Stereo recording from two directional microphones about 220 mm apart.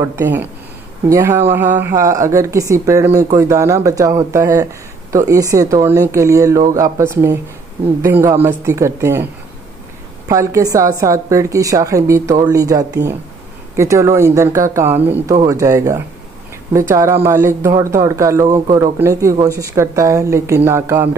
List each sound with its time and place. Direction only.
0.0 s speech: 10° right (ahead or behind)